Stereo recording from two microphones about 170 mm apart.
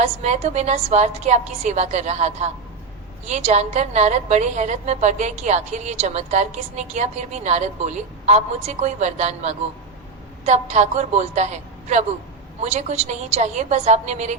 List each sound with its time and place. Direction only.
0.0 s a woman's voice: 40° right (ahead or behind)